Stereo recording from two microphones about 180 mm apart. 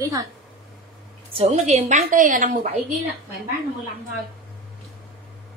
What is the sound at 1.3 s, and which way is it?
A woman's voice, 35° right (ahead or behind).